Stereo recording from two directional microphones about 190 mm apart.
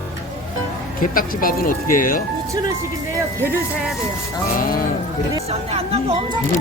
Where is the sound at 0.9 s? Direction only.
50° left (ahead or behind).